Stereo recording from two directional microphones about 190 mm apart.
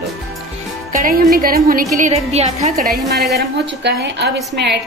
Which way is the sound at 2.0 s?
35° right (ahead or behind).